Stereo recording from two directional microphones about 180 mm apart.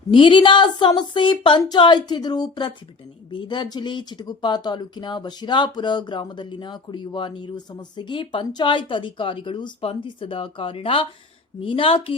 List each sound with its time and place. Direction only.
0.1 s speech: 25° left (ahead or behind)